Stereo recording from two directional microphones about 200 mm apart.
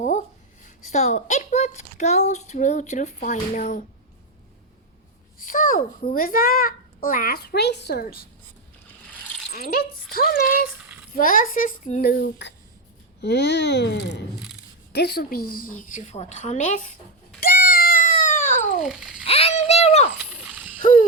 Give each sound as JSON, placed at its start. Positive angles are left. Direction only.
{"t": 0.0, "sound": "a woman's voice", "side_deg": 35}
{"t": 5.4, "sound": "a child's voice", "side_deg": 40}
{"t": 9.6, "sound": "a child's voice", "side_deg": 50}
{"t": 12.1, "sound": "a child's voice", "side_deg": 60}
{"t": 17.4, "sound": "a sound", "side_deg": 45}
{"t": 18.8, "sound": "a child's voice", "side_deg": 0}
{"t": 19.2, "sound": "a woman's voice", "side_deg": 30}
{"t": 20.1, "sound": "a sound", "side_deg": -5}
{"t": 20.8, "sound": "a sound", "side_deg": 40}